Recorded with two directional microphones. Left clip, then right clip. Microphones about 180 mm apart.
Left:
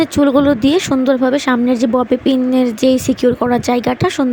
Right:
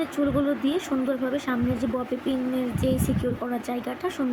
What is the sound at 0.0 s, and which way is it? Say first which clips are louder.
Speech: left 13 dB; 60° left (ahead or behind).